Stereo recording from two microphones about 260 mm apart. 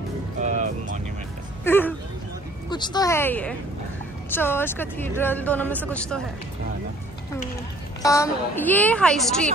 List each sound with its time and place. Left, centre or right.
0.4 s music: right
1.6 s music: centre
2.7 s a woman's voice: centre
8.0 s a woman's voice: centre